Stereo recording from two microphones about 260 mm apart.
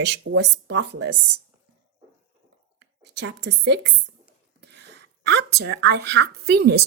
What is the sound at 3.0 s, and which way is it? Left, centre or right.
Speech, right.